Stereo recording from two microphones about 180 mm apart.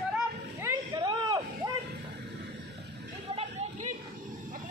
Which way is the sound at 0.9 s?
20° right (ahead or behind).